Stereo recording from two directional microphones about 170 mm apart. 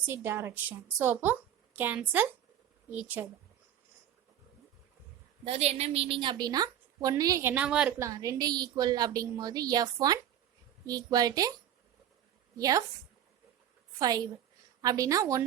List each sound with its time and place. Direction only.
0.0 s a woman's voice: 15° right (ahead or behind)
5.5 s a woman's voice: 40° right (ahead or behind); by 7.9 s 5° right (ahead or behind)
7.9 s a woman's voice: 20° right (ahead or behind)
12.5 s a woman's voice: 20° right (ahead or behind)
14.0 s a woman's voice: 20° right (ahead or behind)